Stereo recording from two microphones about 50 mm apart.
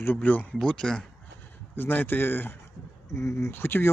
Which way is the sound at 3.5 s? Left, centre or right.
Left.